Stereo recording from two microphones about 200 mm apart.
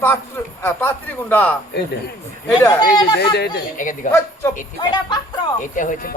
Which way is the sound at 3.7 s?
40° left (ahead or behind).